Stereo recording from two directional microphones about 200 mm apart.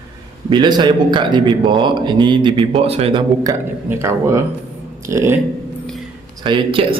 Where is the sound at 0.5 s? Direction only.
20° right (ahead or behind).